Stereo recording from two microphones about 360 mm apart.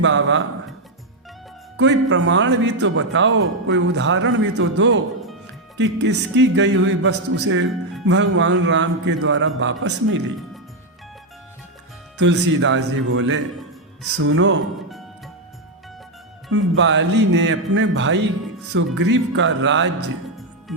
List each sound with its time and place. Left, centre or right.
0.0 s speech: right
1.7 s a man's voice: right
12.1 s speech: right
16.5 s speech: right
20.7 s music: centre